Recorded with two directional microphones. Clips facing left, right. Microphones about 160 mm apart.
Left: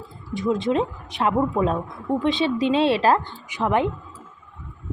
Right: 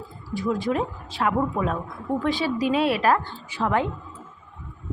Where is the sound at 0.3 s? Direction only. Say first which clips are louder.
Left 3 dB; 20° left (ahead or behind).